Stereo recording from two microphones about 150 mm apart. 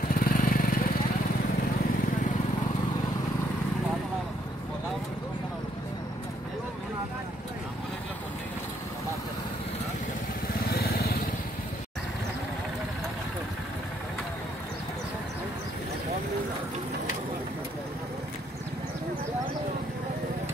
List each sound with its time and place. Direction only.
0.1 s vehicle: 70° left (ahead or behind)
10.7 s vehicle: 90° left